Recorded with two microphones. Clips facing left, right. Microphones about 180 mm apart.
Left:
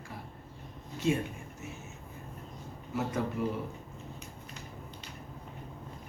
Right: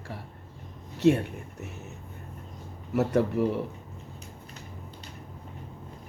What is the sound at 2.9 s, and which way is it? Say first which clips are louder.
Speech: right 8 dB; 65° right (ahead or behind).